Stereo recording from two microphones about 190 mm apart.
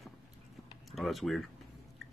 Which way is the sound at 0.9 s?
Centre (ahead or behind).